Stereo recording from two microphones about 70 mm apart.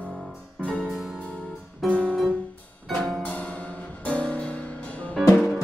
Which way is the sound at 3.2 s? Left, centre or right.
Left.